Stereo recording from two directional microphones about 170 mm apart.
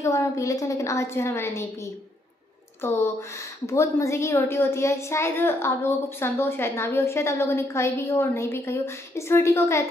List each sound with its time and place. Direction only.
0.0 s a child's voice: 20° left (ahead or behind)
2.8 s a child's voice: 15° left (ahead or behind)